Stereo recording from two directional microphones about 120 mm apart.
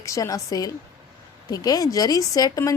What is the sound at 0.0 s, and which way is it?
A woman's voice, 25° left (ahead or behind).